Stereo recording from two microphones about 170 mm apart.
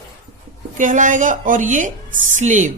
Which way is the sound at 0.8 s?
50° right (ahead or behind).